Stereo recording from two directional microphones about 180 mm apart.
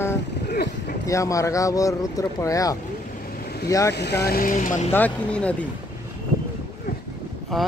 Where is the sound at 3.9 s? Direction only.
65° left (ahead or behind); by 4.9 s 45° left (ahead or behind).